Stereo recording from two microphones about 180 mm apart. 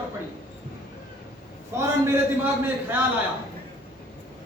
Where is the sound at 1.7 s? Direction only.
15° right (ahead or behind).